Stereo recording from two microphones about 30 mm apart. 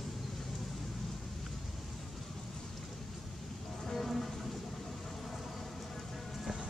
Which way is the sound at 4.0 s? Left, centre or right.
Centre.